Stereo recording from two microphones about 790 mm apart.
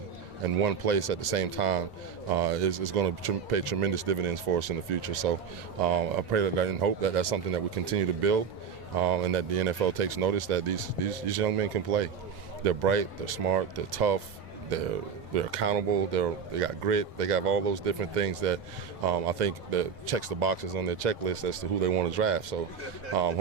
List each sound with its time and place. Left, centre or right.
0.5 s speech: right